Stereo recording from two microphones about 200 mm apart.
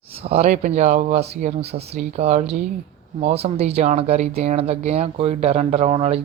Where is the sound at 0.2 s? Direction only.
30° right (ahead or behind).